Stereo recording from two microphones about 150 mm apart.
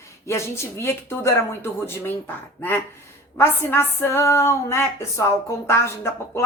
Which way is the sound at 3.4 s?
15° left (ahead or behind).